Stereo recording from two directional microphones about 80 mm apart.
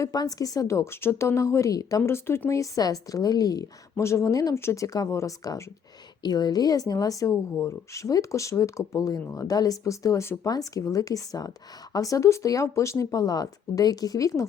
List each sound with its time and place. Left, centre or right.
0.0 s a woman's voice: left
2.0 s a woman's voice: left
3.9 s a woman's voice: left
6.2 s a woman's voice: left
13.1 s a woman's voice: left